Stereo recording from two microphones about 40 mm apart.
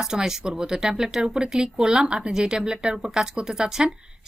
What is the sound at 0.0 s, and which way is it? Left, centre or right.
A woman's voice, centre.